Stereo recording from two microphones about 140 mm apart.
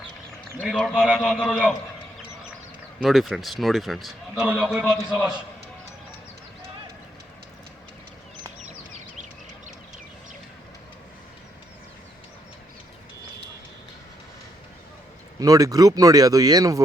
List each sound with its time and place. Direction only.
0.5 s a man's voice: 10° right (ahead or behind)
0.8 s a man's voice: 5° left (ahead or behind)
3.0 s a man's voice: centre (ahead or behind)
15.4 s speech: 25° right (ahead or behind)